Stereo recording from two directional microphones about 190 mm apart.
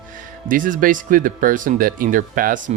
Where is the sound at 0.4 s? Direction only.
45° right (ahead or behind).